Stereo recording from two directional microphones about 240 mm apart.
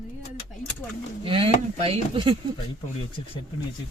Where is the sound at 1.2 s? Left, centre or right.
Right.